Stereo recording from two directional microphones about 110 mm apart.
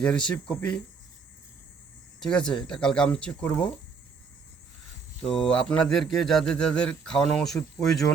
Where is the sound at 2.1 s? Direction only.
5° left (ahead or behind).